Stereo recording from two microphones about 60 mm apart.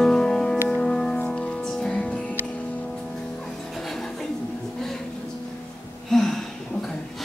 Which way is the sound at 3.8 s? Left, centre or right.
Centre.